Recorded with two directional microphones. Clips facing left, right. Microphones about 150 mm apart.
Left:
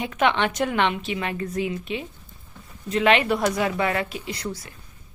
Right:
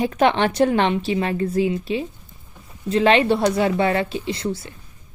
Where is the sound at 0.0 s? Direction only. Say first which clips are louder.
Right 4 dB; 35° right (ahead or behind).